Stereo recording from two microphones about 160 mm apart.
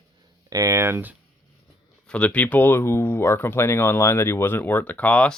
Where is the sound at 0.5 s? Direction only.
20° right (ahead or behind).